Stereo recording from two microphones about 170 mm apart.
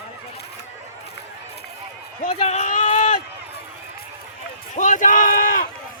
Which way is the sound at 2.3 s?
40° left (ahead or behind).